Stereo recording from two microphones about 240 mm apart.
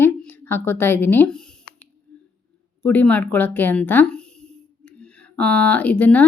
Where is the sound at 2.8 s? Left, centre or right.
Centre.